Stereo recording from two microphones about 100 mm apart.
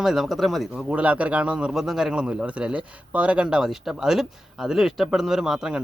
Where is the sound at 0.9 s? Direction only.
15° right (ahead or behind).